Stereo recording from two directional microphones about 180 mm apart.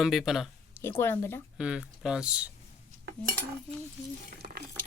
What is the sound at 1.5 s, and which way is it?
Speech, 5° right (ahead or behind).